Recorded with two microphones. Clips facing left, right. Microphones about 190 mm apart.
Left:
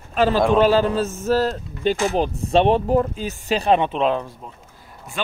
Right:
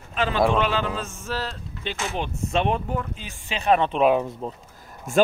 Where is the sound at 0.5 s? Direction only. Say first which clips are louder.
Left 8 dB; 40° left (ahead or behind).